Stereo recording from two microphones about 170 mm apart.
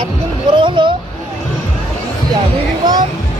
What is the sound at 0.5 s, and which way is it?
Speech, 30° right (ahead or behind).